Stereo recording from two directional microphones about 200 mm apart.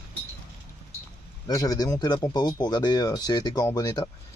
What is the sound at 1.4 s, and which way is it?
A man's voice, 20° left (ahead or behind).